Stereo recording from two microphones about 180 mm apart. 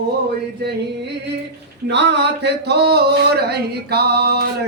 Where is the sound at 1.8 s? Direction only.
70° right (ahead or behind).